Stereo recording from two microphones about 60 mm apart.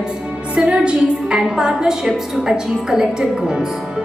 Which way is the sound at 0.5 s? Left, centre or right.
Centre.